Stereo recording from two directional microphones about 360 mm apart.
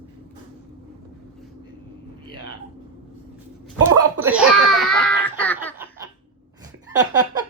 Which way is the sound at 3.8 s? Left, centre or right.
Centre.